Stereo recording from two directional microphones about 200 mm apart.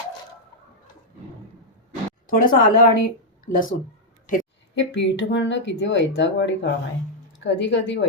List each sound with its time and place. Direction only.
2.2 s speech: 45° left (ahead or behind)
4.7 s speech: 60° left (ahead or behind)